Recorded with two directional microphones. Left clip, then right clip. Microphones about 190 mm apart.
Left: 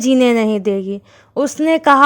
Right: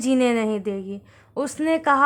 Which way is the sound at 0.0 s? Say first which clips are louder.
Left 7 dB; 35° left (ahead or behind).